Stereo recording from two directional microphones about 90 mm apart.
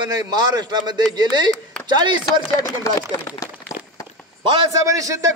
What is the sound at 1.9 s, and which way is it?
Speech, 55° right (ahead or behind).